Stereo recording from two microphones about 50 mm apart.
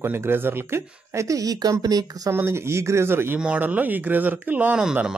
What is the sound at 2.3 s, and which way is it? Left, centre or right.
Speech, right.